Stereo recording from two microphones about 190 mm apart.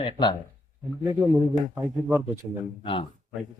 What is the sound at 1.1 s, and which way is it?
Speech, 25° right (ahead or behind).